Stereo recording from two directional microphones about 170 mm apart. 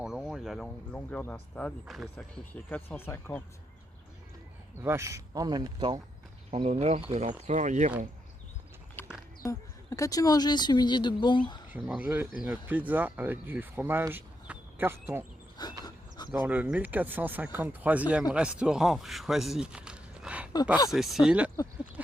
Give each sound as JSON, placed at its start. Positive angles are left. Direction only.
{"t": 0.0, "sound": "speech", "side_deg": 0}
{"t": 4.8, "sound": "speech", "side_deg": -15}
{"t": 6.5, "sound": "speech", "side_deg": -40}
{"t": 9.0, "sound": "a sound", "side_deg": 10}
{"t": 9.4, "sound": "speech", "side_deg": 20}
{"t": 11.9, "sound": "speech", "side_deg": -10}
{"t": 15.8, "sound": "a sound", "side_deg": 25}
{"t": 16.3, "sound": "speech", "side_deg": -10}